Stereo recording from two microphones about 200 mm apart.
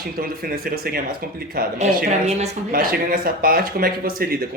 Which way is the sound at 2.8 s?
50° right (ahead or behind).